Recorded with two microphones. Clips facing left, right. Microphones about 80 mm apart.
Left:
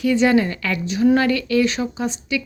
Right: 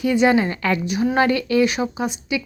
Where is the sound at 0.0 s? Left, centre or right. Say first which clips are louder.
Even; right.